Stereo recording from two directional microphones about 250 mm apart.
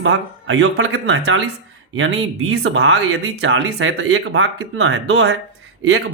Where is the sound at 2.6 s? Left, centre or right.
Right.